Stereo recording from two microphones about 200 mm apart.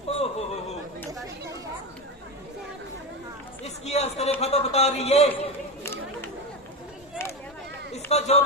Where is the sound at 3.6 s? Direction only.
35° left (ahead or behind).